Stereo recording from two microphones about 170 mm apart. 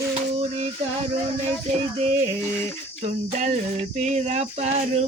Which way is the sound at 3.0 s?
40° right (ahead or behind).